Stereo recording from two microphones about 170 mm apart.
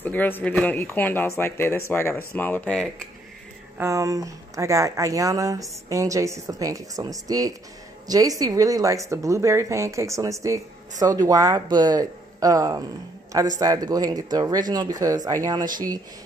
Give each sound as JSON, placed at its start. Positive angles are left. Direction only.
{"t": 0.0, "sound": "speech", "side_deg": 10}
{"t": 3.7, "sound": "speech", "side_deg": -15}